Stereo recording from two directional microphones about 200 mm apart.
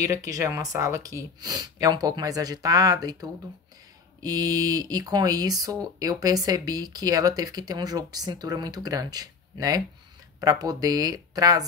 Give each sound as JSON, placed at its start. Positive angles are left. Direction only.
{"t": 0.0, "sound": "speech", "side_deg": -15}